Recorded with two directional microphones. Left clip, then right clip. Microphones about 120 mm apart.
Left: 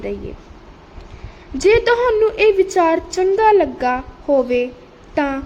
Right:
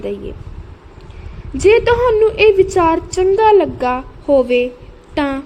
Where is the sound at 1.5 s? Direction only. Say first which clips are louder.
Right 2 dB; 15° right (ahead or behind).